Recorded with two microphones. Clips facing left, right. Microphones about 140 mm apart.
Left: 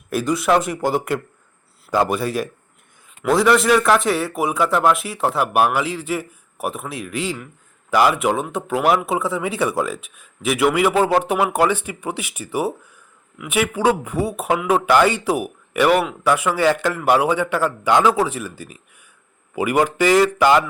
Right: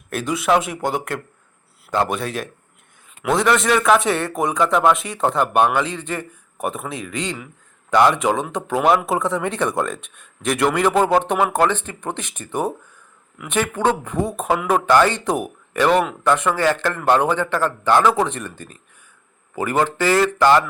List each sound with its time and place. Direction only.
0.1 s speech: centre (ahead or behind)